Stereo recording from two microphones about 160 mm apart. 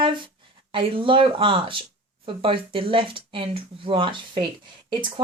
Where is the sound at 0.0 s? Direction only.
30° right (ahead or behind).